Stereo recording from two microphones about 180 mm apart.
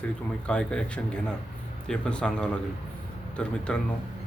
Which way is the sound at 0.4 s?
5° left (ahead or behind).